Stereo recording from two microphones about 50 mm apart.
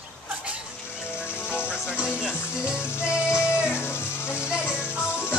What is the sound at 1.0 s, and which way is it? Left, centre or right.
Music, left.